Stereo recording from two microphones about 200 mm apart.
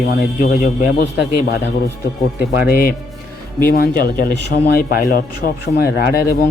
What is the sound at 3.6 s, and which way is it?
Speech, 45° left (ahead or behind).